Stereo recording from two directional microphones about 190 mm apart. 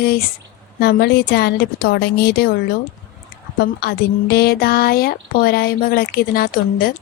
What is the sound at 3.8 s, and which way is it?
Speech, 55° left (ahead or behind).